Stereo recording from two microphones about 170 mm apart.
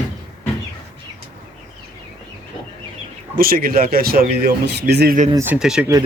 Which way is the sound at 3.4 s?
60° right (ahead or behind).